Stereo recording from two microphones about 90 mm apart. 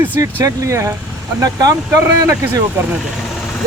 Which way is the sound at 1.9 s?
30° right (ahead or behind).